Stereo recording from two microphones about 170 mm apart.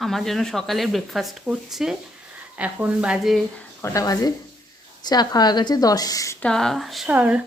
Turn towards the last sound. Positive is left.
turn(degrees=-10)  # may be behind; listen again after turning